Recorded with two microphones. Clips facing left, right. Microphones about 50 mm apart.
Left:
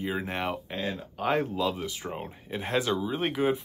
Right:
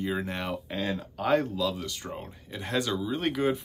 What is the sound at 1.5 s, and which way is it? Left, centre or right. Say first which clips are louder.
Speech: left 1 dB; left.